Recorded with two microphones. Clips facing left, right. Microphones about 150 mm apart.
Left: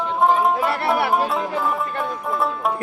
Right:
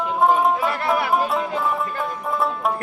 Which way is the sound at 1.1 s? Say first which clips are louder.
Even; centre (ahead or behind).